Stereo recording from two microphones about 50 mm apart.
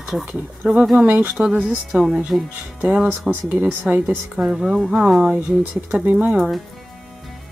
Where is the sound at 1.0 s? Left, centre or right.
Right.